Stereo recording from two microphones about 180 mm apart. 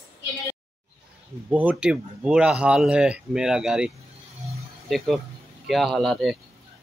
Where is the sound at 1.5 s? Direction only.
10° right (ahead or behind).